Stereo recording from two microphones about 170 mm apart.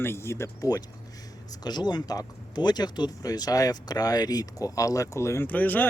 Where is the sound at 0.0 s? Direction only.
15° left (ahead or behind).